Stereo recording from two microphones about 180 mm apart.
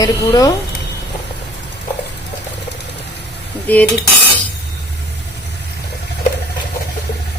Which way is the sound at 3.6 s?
10° left (ahead or behind).